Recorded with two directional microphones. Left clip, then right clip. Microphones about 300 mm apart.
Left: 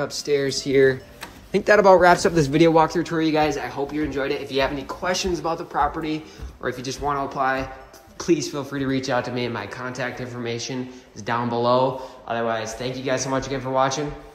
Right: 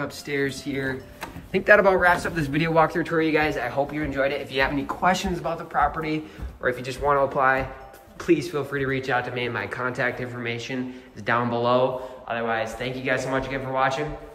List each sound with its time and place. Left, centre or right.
0.0 s speech: centre
1.2 s speech: centre